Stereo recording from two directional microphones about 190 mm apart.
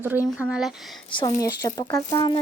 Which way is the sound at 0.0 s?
10° right (ahead or behind).